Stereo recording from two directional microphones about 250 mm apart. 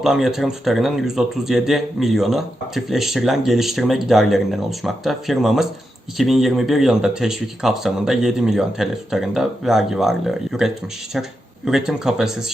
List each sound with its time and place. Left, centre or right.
0.0 s speech: centre